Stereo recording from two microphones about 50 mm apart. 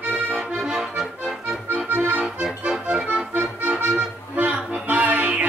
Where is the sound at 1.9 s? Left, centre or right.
Right.